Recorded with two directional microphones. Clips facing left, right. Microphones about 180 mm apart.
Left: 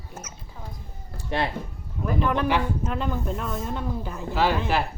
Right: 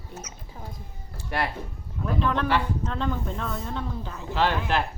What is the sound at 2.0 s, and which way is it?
Speech, 10° left (ahead or behind).